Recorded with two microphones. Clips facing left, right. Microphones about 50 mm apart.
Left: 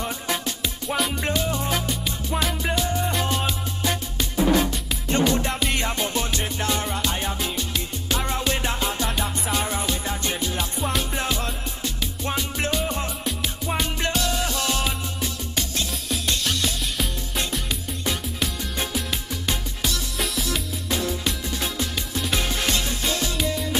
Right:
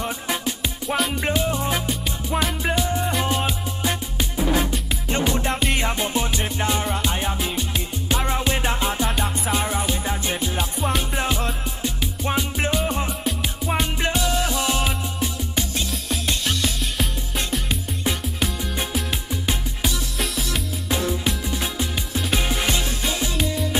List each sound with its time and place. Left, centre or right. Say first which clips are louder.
0.0 s music: right 2 dB; centre
1.2 s music: right 2 dB; centre
5.5 s music: right 2 dB; centre
16.3 s music: right 1 dB; centre
21.5 s music: right 1 dB; centre